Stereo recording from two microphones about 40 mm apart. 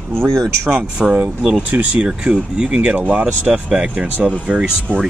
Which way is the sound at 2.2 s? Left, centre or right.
Right.